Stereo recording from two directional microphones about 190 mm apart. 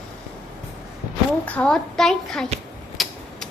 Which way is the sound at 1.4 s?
5° left (ahead or behind).